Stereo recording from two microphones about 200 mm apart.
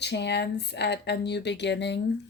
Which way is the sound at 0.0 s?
60° left (ahead or behind).